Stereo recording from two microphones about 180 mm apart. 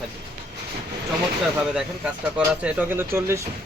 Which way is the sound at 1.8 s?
5° right (ahead or behind).